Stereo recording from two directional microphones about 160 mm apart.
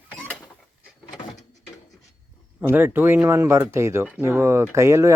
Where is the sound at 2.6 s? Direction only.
10° right (ahead or behind).